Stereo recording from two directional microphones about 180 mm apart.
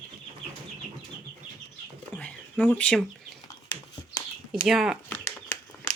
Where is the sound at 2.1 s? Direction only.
10° left (ahead or behind).